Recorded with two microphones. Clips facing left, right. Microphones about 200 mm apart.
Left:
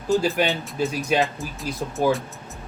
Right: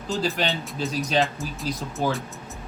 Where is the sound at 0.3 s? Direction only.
15° left (ahead or behind).